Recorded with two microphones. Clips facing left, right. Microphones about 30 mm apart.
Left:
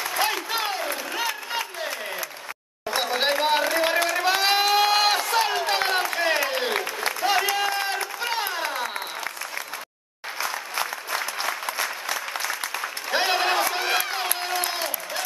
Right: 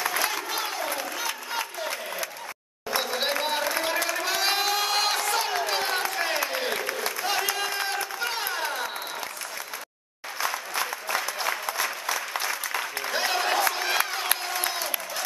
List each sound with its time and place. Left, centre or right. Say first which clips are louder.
0.2 s applause: left 3 dB; left
2.9 s a sound: left 3 dB; left
4.1 s run: left 4 dB; left
7.2 s a sound: left 7 dB; centre
7.5 s run: left 4 dB; centre
10.5 s applause: left 1 dB; centre
13.1 s a sound: left 4 dB; left
13.7 s crowd: left 2 dB; centre
14.5 s applause: left 2 dB; left